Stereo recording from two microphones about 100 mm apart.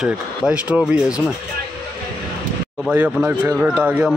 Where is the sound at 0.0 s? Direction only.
10° right (ahead or behind).